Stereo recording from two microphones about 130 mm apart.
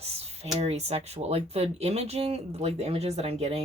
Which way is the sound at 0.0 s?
55° right (ahead or behind).